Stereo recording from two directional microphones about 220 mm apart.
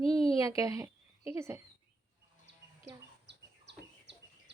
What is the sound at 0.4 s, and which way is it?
A woman's voice, 15° right (ahead or behind).